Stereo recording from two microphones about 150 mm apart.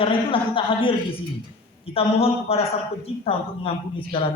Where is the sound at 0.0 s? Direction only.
35° left (ahead or behind).